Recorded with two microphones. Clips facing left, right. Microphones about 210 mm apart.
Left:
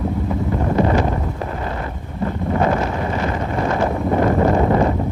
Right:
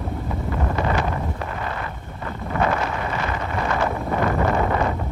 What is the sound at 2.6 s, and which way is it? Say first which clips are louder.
Wind noise: left 3 dB; 25° left (ahead or behind).